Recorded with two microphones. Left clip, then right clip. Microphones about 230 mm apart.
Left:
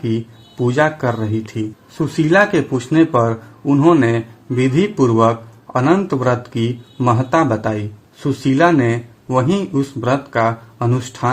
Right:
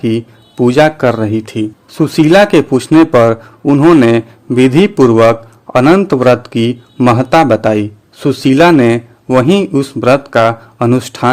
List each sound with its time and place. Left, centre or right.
0.0 s speech: right